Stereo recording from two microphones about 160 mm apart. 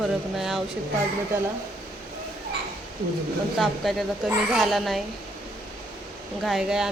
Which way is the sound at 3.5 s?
Centre (ahead or behind).